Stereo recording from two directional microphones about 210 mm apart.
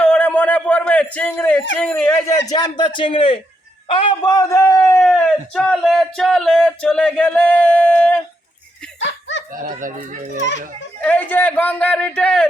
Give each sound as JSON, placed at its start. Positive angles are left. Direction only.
{"t": 0.0, "sound": "a sound", "side_deg": 5}
{"t": 1.8, "sound": "a man's voice", "side_deg": 10}
{"t": 9.0, "sound": "snicker", "side_deg": 60}
{"t": 9.6, "sound": "speech", "side_deg": -40}
{"t": 11.0, "sound": "speech", "side_deg": 5}